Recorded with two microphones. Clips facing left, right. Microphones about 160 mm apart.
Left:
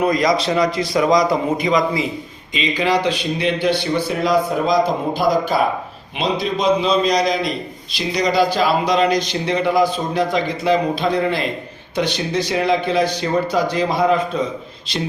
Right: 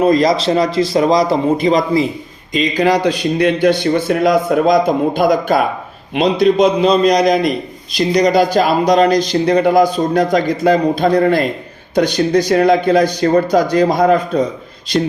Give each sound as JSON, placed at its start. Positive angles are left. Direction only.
{"t": 0.0, "sound": "a man's voice", "side_deg": -30}